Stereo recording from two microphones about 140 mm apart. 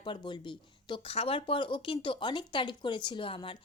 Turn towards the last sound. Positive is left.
turn(degrees=40)  # may be behind; listen again after turning